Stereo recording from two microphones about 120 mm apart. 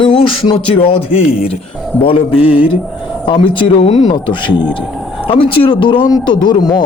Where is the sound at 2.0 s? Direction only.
50° left (ahead or behind).